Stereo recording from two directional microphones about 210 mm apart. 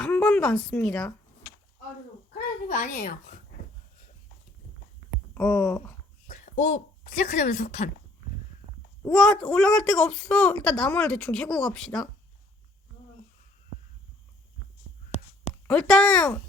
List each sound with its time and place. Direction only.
0.0 s a woman's voice: 5° left (ahead or behind)
2.6 s a child's voice: 40° left (ahead or behind)
5.3 s a sound: 15° left (ahead or behind)
6.2 s speech: 35° left (ahead or behind)
9.0 s speech: 5° left (ahead or behind)
15.1 s a sound: 35° left (ahead or behind)
15.6 s speech: 5° left (ahead or behind)